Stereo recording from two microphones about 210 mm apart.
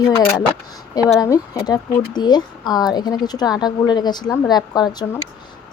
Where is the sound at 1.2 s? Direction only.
20° left (ahead or behind).